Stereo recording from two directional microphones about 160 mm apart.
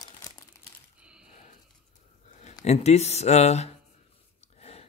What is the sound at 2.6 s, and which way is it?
Speech, 45° left (ahead or behind).